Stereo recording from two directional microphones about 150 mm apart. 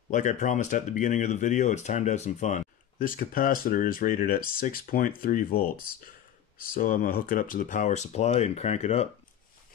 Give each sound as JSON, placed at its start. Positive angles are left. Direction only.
{"t": 0.1, "sound": "speech", "side_deg": 55}
{"t": 6.7, "sound": "speech", "side_deg": 70}